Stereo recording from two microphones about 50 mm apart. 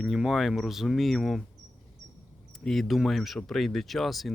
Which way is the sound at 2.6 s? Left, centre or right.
Centre.